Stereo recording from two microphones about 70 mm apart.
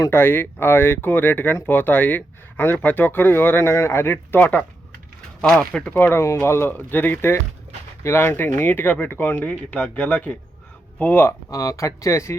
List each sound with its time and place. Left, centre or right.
0.1 s speech: left
5.4 s speech: centre
5.9 s speech: left
11.5 s speech: left